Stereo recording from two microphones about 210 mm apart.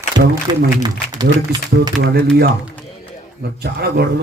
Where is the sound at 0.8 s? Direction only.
20° right (ahead or behind).